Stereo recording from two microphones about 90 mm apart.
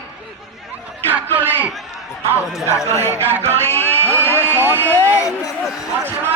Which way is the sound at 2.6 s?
35° left (ahead or behind).